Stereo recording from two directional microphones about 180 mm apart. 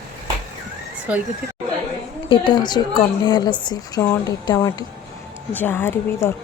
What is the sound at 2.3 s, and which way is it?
A woman's voice, 25° left (ahead or behind).